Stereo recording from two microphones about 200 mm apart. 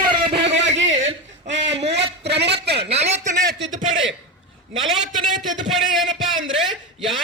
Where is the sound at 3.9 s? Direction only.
75° right (ahead or behind).